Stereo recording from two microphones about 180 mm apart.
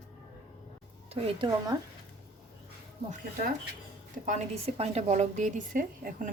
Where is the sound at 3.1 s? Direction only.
50° right (ahead or behind).